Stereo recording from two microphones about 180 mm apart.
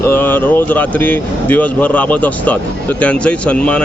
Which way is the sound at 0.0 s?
10° left (ahead or behind).